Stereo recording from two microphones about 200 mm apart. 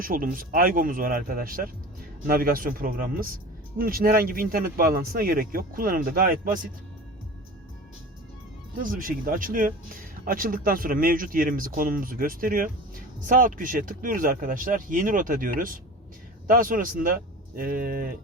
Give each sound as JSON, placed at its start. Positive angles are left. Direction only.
{"t": 0.0, "sound": "speech", "side_deg": -45}
{"t": 8.8, "sound": "speech", "side_deg": -45}